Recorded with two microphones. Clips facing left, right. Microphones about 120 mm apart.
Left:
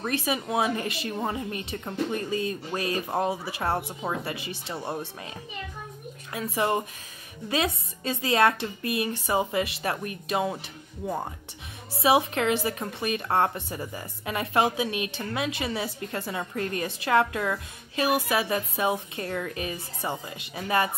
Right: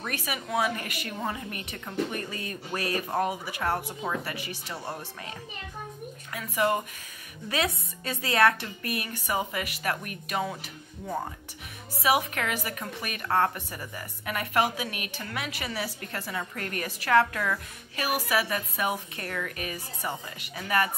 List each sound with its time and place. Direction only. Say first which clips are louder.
0.0 s a woman's voice: left 6 dB; 25° left (ahead or behind)
6.3 s a woman's voice: left 1 dB; 30° left (ahead or behind)
12.0 s a woman's voice: left 4 dB; 25° left (ahead or behind)